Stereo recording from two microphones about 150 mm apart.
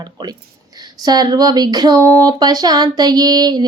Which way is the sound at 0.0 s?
30° right (ahead or behind).